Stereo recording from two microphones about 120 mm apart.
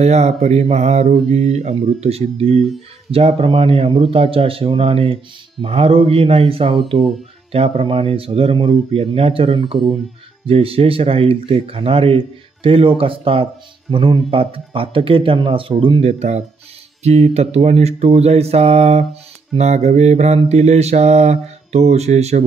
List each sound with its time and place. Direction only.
0.0 s mantra: 65° right (ahead or behind)
3.1 s speech: 55° right (ahead or behind)
16.0 s mantra: 65° right (ahead or behind)